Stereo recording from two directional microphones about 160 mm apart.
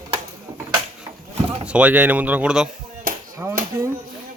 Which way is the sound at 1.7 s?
10° right (ahead or behind).